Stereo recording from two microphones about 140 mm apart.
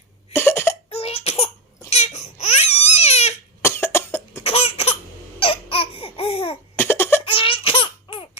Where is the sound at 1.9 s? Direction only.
50° left (ahead or behind).